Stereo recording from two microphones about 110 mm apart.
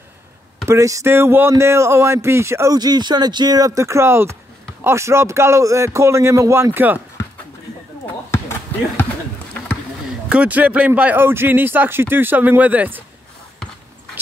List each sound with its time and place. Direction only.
0.7 s speech: 30° right (ahead or behind)
8.3 s basketball bounce: 25° left (ahead or behind)
10.3 s speech: 10° right (ahead or behind)